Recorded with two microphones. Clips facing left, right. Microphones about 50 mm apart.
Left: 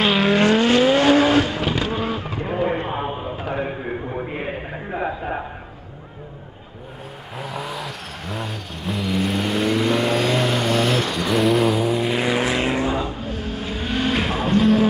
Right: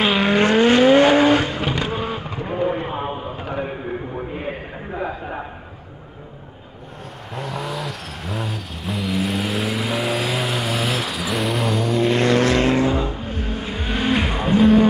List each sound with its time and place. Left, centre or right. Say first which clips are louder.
0.0 s vehicle: even; centre
0.4 s vehicle: right 4 dB; right
2.4 s a sound: even; centre
7.3 s vehicle: right 2 dB; centre
13.4 s vehicle: right 1 dB; centre